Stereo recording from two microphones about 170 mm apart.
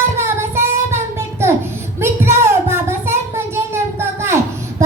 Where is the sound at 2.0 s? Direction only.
15° right (ahead or behind).